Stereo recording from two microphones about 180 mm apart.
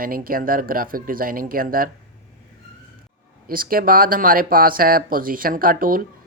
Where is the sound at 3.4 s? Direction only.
55° right (ahead or behind).